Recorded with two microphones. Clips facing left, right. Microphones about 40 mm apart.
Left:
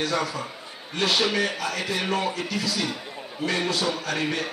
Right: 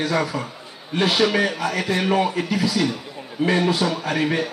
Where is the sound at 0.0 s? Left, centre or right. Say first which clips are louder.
Right 4 dB; centre.